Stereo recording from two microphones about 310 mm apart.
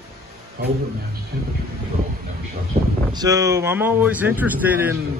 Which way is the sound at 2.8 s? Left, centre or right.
Centre.